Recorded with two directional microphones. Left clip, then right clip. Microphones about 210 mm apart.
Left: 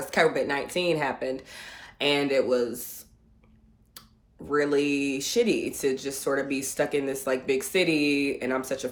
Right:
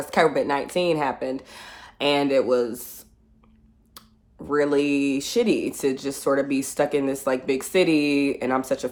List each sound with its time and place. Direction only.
0.0 s a woman's voice: 20° right (ahead or behind)
4.0 s a sound: 20° right (ahead or behind)
4.4 s speech: 20° right (ahead or behind)